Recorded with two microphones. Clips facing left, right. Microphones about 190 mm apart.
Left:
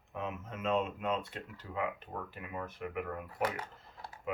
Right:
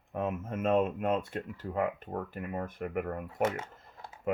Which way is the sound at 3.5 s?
25° right (ahead or behind).